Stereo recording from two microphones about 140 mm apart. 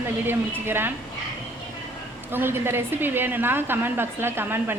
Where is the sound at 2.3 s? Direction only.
15° right (ahead or behind).